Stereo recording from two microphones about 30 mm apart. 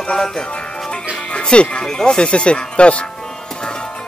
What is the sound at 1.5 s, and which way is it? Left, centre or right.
Speech, left.